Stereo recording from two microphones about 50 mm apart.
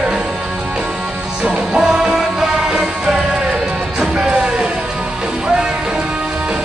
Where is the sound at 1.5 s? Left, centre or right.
Centre.